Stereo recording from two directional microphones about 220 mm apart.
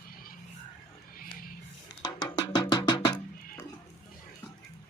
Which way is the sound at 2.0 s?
20° left (ahead or behind).